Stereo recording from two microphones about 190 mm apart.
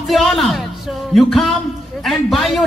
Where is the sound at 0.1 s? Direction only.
Centre (ahead or behind).